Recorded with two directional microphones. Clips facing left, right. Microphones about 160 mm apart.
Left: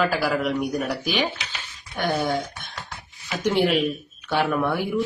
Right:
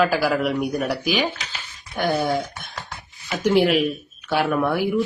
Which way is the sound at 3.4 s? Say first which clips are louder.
Right 3 dB; 5° right (ahead or behind).